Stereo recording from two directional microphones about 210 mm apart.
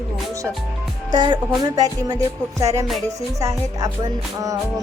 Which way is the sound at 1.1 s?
20° right (ahead or behind).